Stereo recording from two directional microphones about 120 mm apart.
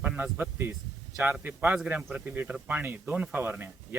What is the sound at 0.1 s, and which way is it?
Speech, 15° right (ahead or behind).